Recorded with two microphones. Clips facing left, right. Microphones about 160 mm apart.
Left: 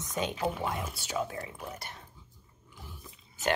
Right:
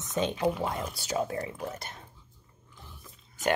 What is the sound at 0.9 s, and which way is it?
Speech, 40° right (ahead or behind).